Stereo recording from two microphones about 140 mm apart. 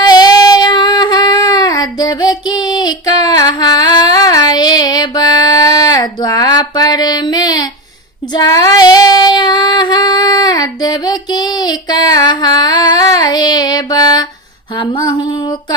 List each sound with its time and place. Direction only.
0.0 s child singing: 30° left (ahead or behind)
14.8 s music: 30° left (ahead or behind)